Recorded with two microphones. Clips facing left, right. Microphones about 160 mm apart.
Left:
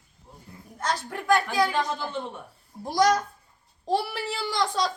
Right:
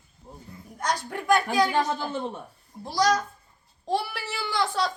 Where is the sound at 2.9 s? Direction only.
50° left (ahead or behind).